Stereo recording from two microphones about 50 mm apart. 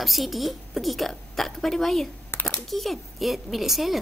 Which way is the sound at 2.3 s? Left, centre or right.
Left.